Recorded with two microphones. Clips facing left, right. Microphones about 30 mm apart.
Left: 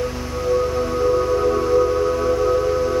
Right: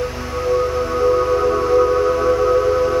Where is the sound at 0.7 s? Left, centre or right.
Centre.